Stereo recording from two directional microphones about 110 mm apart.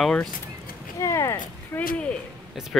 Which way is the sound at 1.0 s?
25° left (ahead or behind).